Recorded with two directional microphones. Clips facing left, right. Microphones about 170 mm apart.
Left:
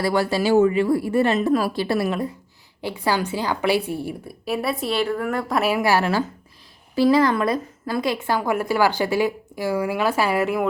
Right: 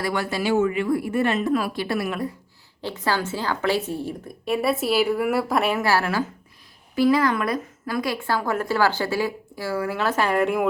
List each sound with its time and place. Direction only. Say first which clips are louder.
0.0 s speech: left 4 dB; 30° left (ahead or behind)
2.8 s a woman's voice: left 2 dB; 10° left (ahead or behind)
4.4 s a woman's voice: right 2 dB; centre (ahead or behind)
6.9 s a woman's voice: left 2 dB; 30° left (ahead or behind); by 10.7 s centre (ahead or behind)